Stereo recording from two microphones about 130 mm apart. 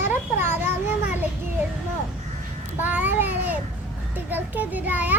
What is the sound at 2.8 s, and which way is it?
A child's voice, 15° right (ahead or behind).